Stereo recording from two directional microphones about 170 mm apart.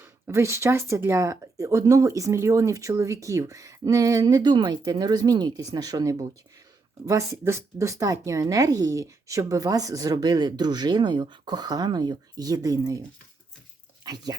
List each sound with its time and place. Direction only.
0.0 s speech: 15° right (ahead or behind)